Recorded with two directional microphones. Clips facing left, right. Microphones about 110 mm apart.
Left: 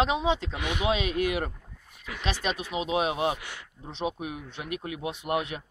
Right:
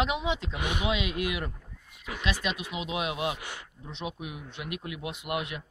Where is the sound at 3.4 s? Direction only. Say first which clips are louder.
Right 1 dB; 20° right (ahead or behind).